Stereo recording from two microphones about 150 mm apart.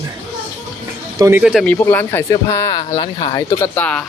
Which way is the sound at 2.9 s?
35° left (ahead or behind).